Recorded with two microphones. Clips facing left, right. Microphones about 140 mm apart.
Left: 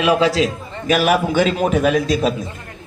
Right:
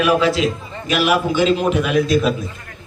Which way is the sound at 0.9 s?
45° left (ahead or behind).